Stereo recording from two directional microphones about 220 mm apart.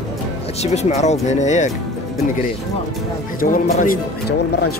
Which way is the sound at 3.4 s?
40° left (ahead or behind).